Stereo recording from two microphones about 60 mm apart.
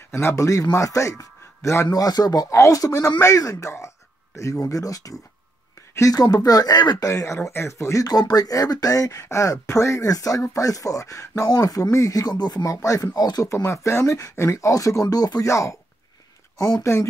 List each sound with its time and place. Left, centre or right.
0.1 s a man's voice: left
0.4 s a man's voice: left
1.9 s speech: left
2.5 s speech: left
3.6 s speech: left
7.4 s speech: left
10.0 s speech: left
15.4 s speech: left